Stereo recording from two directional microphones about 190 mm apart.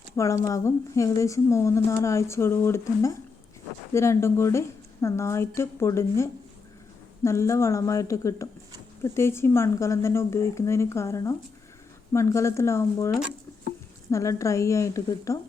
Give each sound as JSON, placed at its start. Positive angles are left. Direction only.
{"t": 0.2, "sound": "a woman's voice", "side_deg": 15}
{"t": 7.3, "sound": "a woman's voice", "side_deg": 15}
{"t": 14.1, "sound": "a woman's voice", "side_deg": 15}